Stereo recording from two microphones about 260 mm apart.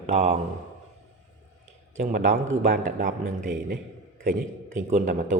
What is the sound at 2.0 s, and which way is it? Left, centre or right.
A man's voice, right.